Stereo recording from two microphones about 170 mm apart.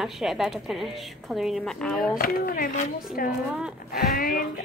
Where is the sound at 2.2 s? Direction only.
55° left (ahead or behind).